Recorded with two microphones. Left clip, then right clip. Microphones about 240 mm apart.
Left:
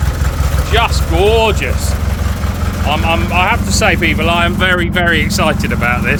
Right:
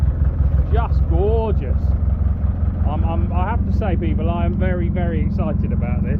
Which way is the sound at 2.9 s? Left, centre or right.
Centre.